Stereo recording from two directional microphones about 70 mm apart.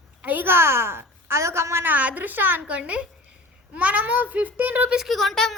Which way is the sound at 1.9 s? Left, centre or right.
Right.